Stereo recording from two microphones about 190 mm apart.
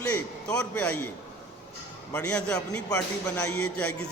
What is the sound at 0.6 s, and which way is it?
Speech, 10° left (ahead or behind).